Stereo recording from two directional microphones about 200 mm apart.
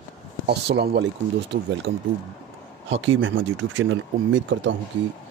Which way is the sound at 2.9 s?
75° right (ahead or behind).